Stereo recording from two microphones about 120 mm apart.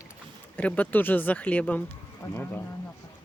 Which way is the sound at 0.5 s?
10° left (ahead or behind).